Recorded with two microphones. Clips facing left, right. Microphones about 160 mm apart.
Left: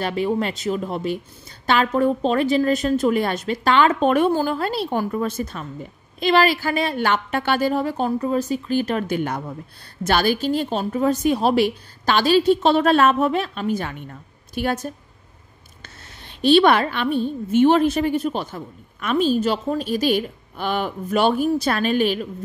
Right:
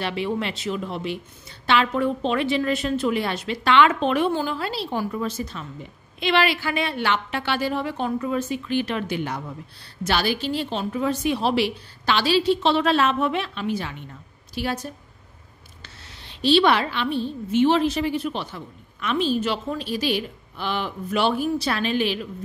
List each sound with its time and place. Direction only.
0.0 s a woman's voice: 45° left (ahead or behind)